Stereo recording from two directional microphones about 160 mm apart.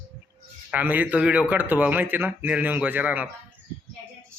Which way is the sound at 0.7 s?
10° right (ahead or behind).